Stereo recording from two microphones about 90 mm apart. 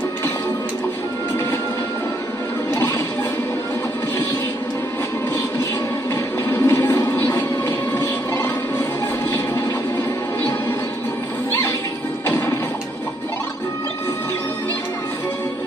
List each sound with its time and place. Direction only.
6.5 s music: 35° left (ahead or behind)
12.3 s music: 35° left (ahead or behind)